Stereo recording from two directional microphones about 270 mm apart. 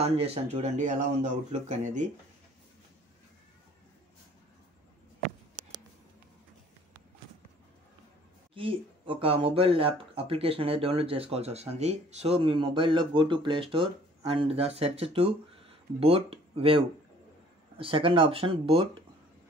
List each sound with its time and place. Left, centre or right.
0.0 s speech: right
8.5 s speech: centre